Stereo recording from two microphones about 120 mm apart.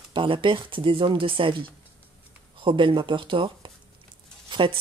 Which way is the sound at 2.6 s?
45° right (ahead or behind).